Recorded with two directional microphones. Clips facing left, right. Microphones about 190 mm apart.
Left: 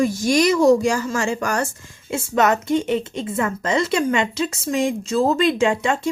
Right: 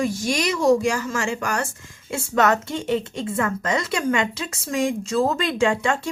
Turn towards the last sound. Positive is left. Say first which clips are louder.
# left 1 dB
turn(degrees=20)  # may be behind; listen again after turning